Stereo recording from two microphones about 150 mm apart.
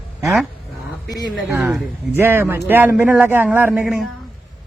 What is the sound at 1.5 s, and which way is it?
Speech, 10° right (ahead or behind).